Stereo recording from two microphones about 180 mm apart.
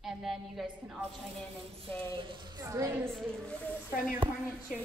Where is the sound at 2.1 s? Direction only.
25° right (ahead or behind).